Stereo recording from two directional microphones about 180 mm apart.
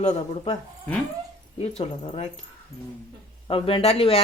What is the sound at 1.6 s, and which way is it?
Speech, 35° left (ahead or behind).